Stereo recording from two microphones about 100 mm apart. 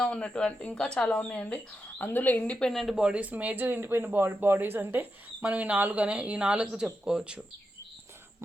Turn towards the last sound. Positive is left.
turn(degrees=-10)  # may be behind; listen again after turning